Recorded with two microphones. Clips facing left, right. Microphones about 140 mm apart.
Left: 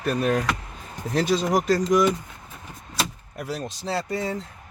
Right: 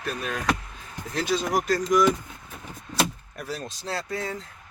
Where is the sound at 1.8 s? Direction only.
25° left (ahead or behind).